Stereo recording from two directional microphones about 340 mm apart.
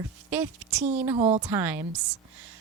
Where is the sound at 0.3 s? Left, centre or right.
Centre.